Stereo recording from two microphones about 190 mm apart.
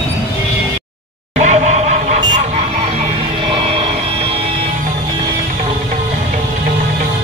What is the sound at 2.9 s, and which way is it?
Music, 30° right (ahead or behind).